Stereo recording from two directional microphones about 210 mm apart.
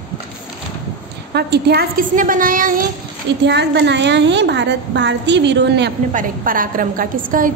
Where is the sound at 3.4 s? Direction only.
55° right (ahead or behind).